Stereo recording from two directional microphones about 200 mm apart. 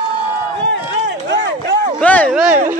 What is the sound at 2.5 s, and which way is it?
Speech, 40° right (ahead or behind).